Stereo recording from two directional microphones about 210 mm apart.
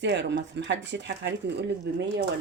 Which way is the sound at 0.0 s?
55° right (ahead or behind).